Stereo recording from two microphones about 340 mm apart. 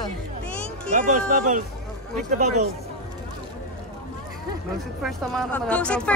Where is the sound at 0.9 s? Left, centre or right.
Right.